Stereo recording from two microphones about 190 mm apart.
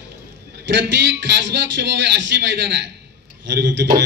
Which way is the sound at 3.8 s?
50° right (ahead or behind).